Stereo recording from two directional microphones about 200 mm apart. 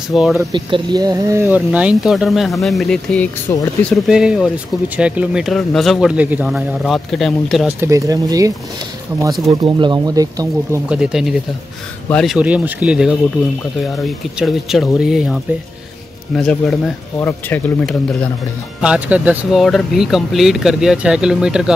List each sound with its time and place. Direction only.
0.1 s speech: centre (ahead or behind)
0.5 s speech: 25° right (ahead or behind); by 7.6 s centre (ahead or behind)
7.8 s speech: 15° right (ahead or behind)
9.5 s speech: 25° right (ahead or behind)
10.9 s speech: 5° right (ahead or behind)
14.4 s speech: centre (ahead or behind)
18.8 s speech: 5° right (ahead or behind)